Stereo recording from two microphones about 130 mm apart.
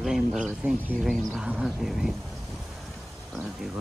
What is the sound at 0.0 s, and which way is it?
Speech, centre (ahead or behind).